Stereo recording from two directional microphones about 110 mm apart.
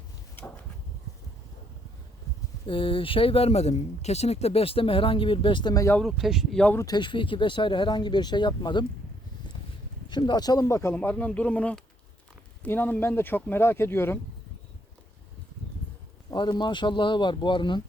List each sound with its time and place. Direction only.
2.6 s speech: 55° left (ahead or behind)
5.7 s speech: 30° left (ahead or behind)
6.0 s speech: centre (ahead or behind)
6.8 s speech: 45° left (ahead or behind)
10.1 s speech: 45° left (ahead or behind)
10.7 s speech: 25° left (ahead or behind)
10.9 s speech: 15° left (ahead or behind)
16.3 s speech: 40° left (ahead or behind)